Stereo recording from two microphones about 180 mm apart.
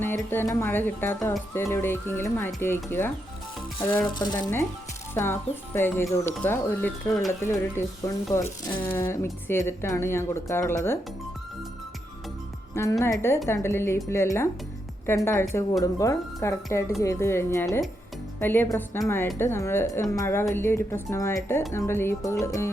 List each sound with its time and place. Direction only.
0.0 s speech: 10° left (ahead or behind)
4.1 s speech: 25° left (ahead or behind)
12.7 s speech: 15° left (ahead or behind)